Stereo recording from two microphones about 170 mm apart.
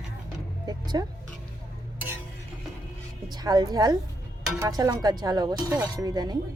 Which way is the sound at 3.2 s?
25° right (ahead or behind).